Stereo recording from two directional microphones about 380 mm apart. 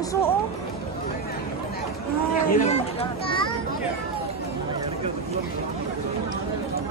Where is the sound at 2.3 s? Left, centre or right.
Left.